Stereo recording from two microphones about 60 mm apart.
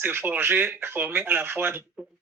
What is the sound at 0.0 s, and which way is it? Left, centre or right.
Speech, right.